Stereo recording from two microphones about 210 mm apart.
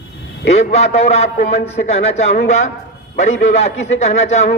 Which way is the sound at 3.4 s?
30° left (ahead or behind).